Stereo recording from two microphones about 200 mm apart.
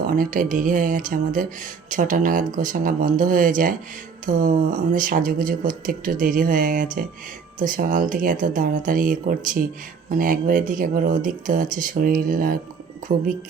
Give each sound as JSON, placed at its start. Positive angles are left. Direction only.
{"t": 0.1, "sound": "speech", "side_deg": -45}